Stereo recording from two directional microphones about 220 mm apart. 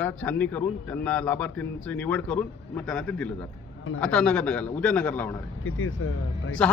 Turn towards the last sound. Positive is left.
turn(degrees=5)  # may be behind; listen again after turning